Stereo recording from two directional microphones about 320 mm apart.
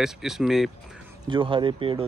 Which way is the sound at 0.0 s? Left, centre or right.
Centre.